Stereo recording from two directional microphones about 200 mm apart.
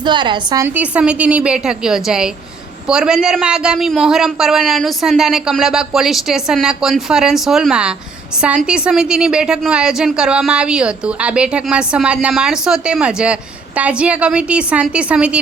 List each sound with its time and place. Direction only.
0.0 s a woman's voice: 25° right (ahead or behind)
0.8 s a woman's voice: 5° right (ahead or behind)